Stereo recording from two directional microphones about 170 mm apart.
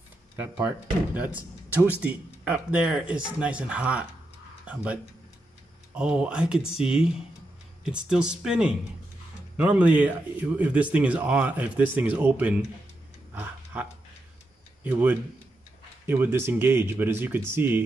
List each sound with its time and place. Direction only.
0.4 s speech: 10° right (ahead or behind)
5.9 s speech: 5° right (ahead or behind)
13.3 s a sound: 10° right (ahead or behind)
14.8 s speech: 10° right (ahead or behind)